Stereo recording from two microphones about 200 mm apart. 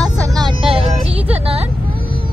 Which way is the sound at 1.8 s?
45° right (ahead or behind).